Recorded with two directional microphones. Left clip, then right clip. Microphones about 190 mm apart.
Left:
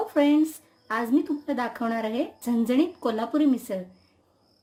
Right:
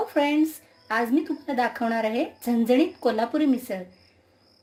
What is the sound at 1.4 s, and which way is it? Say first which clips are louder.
Speech: right 3 dB; 45° left (ahead or behind).